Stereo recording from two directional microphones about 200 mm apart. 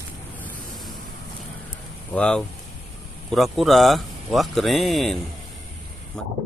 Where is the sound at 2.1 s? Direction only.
5° left (ahead or behind).